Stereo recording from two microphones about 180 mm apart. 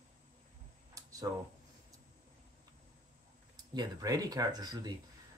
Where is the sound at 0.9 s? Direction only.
20° right (ahead or behind).